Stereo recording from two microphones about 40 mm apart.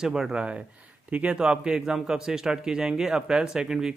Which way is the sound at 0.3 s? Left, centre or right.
Right.